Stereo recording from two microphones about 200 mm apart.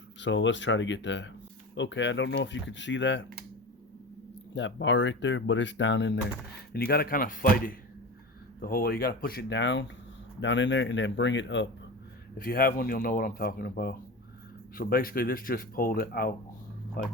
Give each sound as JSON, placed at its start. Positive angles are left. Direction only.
{"t": 0.2, "sound": "speech", "side_deg": 65}
{"t": 4.5, "sound": "speech", "side_deg": 65}
{"t": 6.7, "sound": "speech", "side_deg": 45}
{"t": 12.4, "sound": "speech", "side_deg": 50}